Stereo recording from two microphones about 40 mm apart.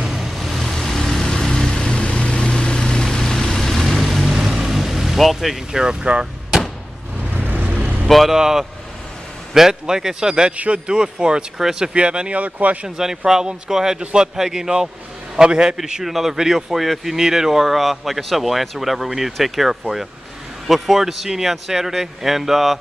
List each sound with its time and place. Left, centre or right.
0.0 s vehicle: centre
0.3 s vehicle: centre
4.4 s vehicle: centre
5.7 s speech: centre
7.3 s vehicle: right
7.6 s vehicle: right
8.1 s speech: centre
8.4 s speech: centre
10.5 s speech: right
10.9 s speech: right
12.4 s speech: right
12.8 s speech: centre
16.0 s speech: centre